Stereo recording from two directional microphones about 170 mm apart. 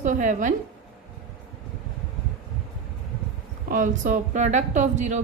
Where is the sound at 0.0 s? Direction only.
45° right (ahead or behind).